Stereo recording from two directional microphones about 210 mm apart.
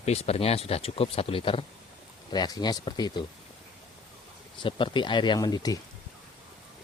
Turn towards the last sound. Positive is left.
turn(degrees=20)  # may be behind; listen again after turning